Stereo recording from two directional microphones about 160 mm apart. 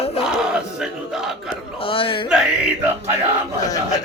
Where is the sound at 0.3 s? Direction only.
5° right (ahead or behind).